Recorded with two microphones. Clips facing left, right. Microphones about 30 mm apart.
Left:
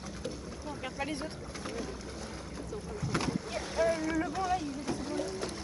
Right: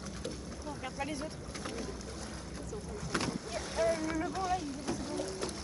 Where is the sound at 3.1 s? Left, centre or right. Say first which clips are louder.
Left 2 dB; centre.